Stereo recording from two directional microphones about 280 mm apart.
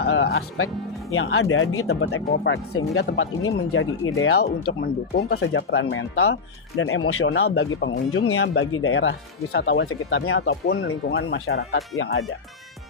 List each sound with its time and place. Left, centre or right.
0.0 s speech: left
4.8 s speech: left
9.9 s speech: left